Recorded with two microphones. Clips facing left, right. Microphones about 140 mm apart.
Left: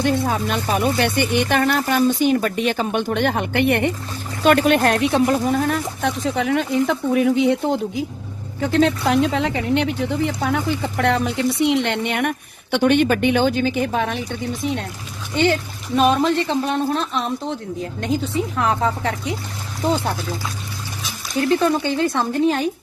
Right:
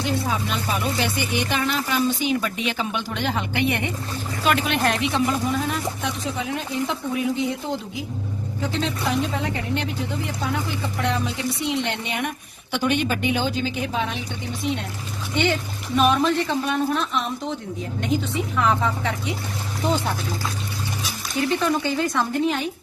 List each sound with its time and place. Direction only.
0.0 s speech: 50° left (ahead or behind)
16.0 s speech: 35° left (ahead or behind)
18.5 s speech: 35° left (ahead or behind)
21.6 s speech: 30° left (ahead or behind)